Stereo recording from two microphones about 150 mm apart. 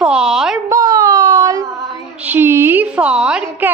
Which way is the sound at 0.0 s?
5° right (ahead or behind).